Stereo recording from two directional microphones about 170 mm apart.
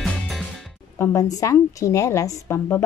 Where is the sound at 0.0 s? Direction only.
Centre (ahead or behind).